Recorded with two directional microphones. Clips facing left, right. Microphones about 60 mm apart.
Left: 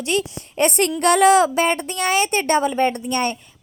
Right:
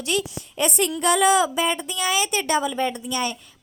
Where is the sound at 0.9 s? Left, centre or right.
Left.